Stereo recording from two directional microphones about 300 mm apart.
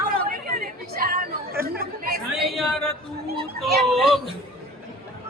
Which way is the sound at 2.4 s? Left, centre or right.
Centre.